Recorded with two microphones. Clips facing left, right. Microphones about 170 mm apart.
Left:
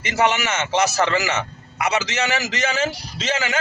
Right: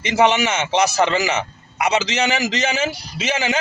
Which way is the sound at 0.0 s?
20° right (ahead or behind).